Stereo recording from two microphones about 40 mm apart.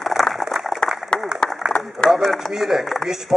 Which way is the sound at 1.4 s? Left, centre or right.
Left.